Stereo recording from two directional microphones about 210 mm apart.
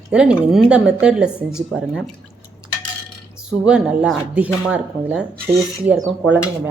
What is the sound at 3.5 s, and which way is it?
Speech, 5° right (ahead or behind).